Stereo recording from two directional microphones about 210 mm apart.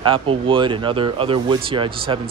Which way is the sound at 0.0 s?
25° right (ahead or behind).